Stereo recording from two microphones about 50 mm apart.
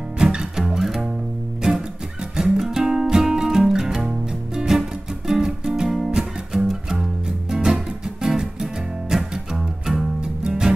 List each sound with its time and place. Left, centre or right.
0.2 s music: centre
1.6 s music: centre